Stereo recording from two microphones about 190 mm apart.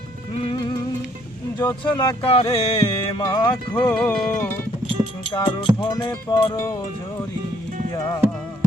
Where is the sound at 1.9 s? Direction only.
25° left (ahead or behind).